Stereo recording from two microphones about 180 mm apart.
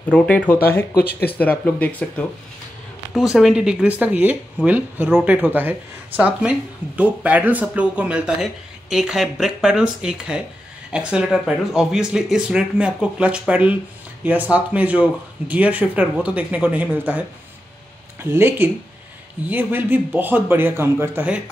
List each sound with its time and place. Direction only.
0.9 s speech: 60° left (ahead or behind)
1.4 s speech: 10° left (ahead or behind); by 17.2 s 10° right (ahead or behind)
18.2 s speech: 15° right (ahead or behind)